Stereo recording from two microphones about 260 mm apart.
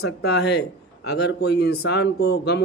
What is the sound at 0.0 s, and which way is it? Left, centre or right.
Speech, left.